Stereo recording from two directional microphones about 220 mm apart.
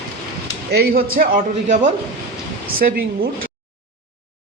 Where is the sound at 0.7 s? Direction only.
45° right (ahead or behind).